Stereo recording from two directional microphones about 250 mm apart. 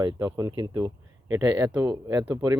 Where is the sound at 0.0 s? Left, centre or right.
Centre.